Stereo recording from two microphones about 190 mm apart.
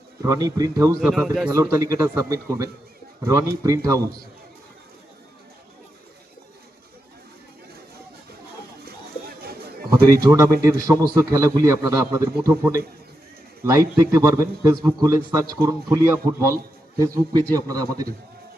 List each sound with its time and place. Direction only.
0.2 s a man's voice: 20° right (ahead or behind)
1.0 s speech: centre (ahead or behind)
1.5 s a man's voice: 15° right (ahead or behind)
10.1 s a man's voice: 15° right (ahead or behind)